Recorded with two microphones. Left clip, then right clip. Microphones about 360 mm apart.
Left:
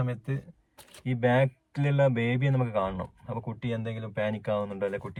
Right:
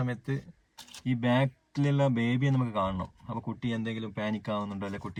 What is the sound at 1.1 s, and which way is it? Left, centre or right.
Speech, left.